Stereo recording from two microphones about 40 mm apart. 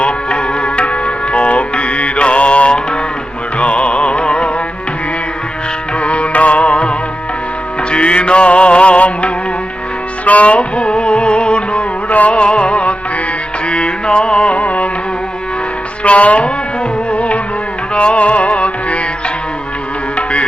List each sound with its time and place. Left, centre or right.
0.0 s music: left
6.0 s music: left
12.4 s music: left
16.0 s music: left